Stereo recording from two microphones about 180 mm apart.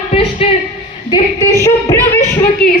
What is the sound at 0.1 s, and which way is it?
Speech, 35° left (ahead or behind).